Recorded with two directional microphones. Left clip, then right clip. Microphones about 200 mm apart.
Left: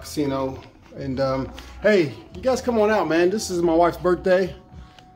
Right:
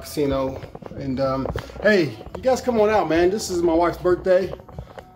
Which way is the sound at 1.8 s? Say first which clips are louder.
Even; 10° right (ahead or behind).